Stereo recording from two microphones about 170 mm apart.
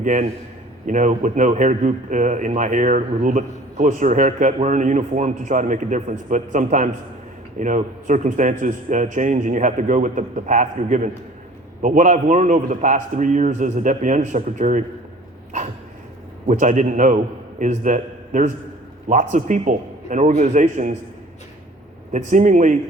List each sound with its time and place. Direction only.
0.0 s a man's voice: 45° right (ahead or behind)
16.5 s a man's voice: 45° right (ahead or behind)
22.1 s a man's voice: 45° right (ahead or behind)